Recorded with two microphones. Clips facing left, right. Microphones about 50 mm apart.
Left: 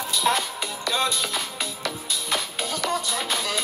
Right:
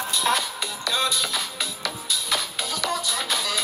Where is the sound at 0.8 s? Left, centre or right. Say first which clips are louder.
Even; left.